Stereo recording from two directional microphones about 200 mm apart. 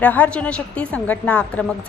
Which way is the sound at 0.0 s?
10° left (ahead or behind).